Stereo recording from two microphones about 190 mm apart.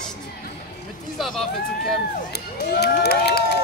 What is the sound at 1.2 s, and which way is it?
Speech, centre (ahead or behind).